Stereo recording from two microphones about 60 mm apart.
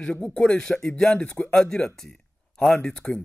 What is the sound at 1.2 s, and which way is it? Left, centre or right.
Speech, centre.